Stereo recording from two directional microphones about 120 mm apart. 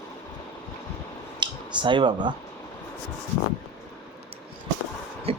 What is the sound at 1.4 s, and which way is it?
Speech, 40° right (ahead or behind).